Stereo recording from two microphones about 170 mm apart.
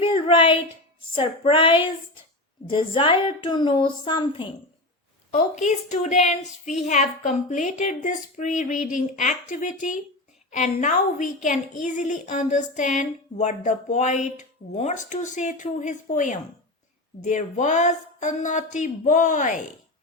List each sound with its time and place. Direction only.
0.0 s a sound: 30° left (ahead or behind)
1.1 s female singing: 30° left (ahead or behind)
2.6 s a woman's voice: 30° left (ahead or behind)
5.3 s a woman's voice: 45° left (ahead or behind)